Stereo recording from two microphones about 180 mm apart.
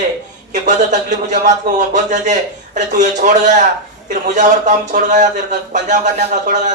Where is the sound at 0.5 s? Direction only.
45° right (ahead or behind).